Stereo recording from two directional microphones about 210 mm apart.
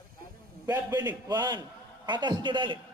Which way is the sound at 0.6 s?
10° right (ahead or behind).